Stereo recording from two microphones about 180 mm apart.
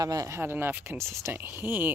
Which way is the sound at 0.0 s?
20° right (ahead or behind).